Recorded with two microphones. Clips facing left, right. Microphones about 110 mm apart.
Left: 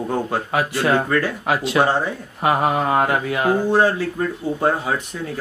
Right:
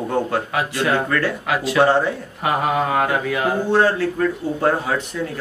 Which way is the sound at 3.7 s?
15° left (ahead or behind).